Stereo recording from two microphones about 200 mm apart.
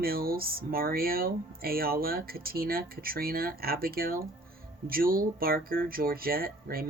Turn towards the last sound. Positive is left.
turn(degrees=-50)  # may be behind; listen again after turning